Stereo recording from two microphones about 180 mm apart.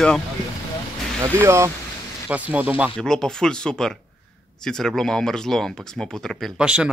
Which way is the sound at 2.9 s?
5° left (ahead or behind).